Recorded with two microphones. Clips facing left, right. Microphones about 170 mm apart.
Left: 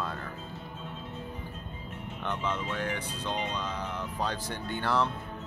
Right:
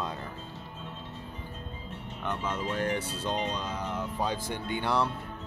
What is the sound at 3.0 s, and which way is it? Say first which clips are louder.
Speech: right 2 dB; 15° left (ahead or behind).